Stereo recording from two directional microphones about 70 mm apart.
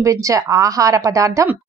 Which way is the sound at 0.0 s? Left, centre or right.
Right.